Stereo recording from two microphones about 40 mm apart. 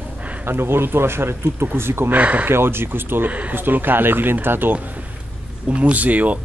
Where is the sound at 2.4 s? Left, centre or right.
Right.